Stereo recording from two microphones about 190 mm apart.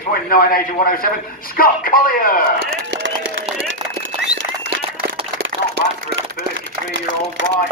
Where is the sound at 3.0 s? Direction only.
85° right.